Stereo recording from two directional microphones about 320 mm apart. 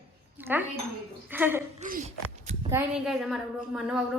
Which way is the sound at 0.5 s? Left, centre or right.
Centre.